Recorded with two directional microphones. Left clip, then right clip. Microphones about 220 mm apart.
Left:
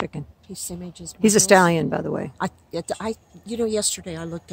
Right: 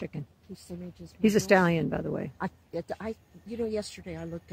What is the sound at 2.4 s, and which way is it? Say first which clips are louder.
Speech: left 7 dB; 50° left (ahead or behind).